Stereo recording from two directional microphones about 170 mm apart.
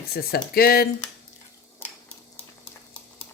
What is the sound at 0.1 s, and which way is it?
Speech, 65° left (ahead or behind).